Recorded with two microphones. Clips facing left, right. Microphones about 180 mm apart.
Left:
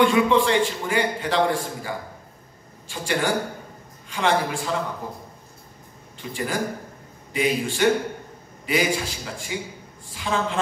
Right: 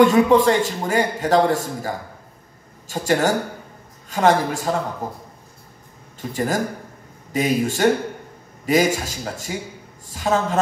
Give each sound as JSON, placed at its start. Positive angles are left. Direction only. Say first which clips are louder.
{"t": 0.0, "sound": "a man's voice", "louder": "right 5 dB", "side_deg": -40}